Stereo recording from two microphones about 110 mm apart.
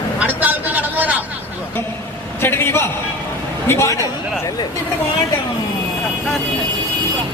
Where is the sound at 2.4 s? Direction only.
20° left (ahead or behind).